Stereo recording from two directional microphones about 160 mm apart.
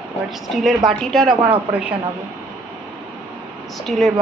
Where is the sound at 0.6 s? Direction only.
Centre (ahead or behind).